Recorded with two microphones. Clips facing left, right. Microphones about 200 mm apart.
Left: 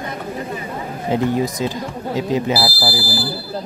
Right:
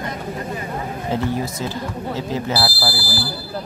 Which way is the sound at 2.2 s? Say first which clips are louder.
Left 5 dB; 15° left (ahead or behind).